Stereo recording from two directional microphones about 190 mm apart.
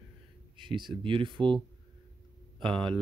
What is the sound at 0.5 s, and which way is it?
Speech, 25° right (ahead or behind).